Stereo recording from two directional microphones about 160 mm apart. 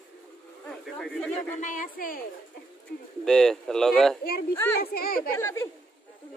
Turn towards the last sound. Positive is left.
turn(degrees=15)  # may be behind; listen again after turning